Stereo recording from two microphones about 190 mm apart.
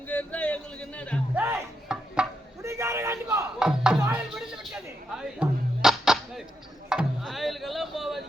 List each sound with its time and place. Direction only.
0.1 s speech: 5° left (ahead or behind)
1.4 s chopping: 10° right (ahead or behind)
2.6 s music: 15° right (ahead or behind)